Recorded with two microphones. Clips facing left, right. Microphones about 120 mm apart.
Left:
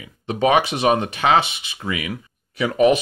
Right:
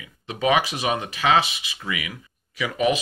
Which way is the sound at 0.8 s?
55° left (ahead or behind).